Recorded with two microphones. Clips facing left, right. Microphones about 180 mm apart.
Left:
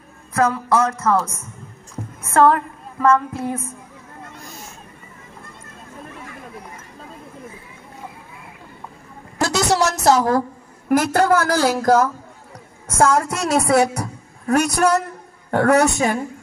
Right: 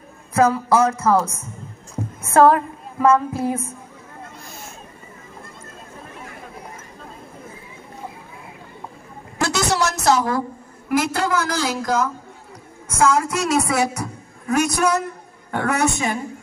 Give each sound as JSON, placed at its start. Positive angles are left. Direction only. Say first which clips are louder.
{"t": 0.3, "sound": "a woman's voice", "louder": "right 2 dB", "side_deg": -20}
{"t": 2.3, "sound": "a woman's voice", "louder": "right 1 dB", "side_deg": -20}
{"t": 9.4, "sound": "a sound", "louder": "left 2 dB", "side_deg": 35}
{"t": 10.9, "sound": "a woman's voice", "louder": "left 5 dB", "side_deg": 50}